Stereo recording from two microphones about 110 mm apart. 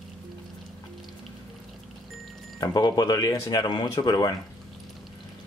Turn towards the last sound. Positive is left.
turn(degrees=35)  # may be behind; listen again after turning